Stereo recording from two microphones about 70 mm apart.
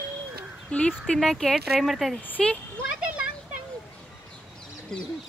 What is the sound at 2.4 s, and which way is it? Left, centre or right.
Speech, centre.